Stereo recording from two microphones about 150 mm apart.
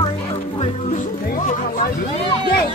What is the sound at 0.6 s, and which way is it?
Music, 45° left (ahead or behind).